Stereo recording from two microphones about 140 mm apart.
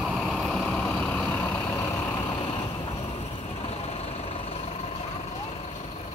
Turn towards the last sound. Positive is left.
turn(degrees=50)  # may be behind; listen again after turning